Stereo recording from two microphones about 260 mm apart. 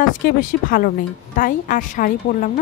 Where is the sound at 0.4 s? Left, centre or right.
Left.